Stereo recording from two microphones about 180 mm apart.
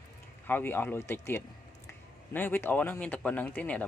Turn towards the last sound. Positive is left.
turn(degrees=10)  # may be behind; listen again after turning